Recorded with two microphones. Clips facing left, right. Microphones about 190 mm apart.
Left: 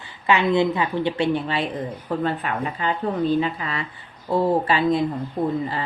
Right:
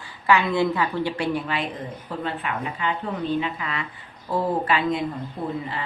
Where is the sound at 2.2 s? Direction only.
40° left (ahead or behind).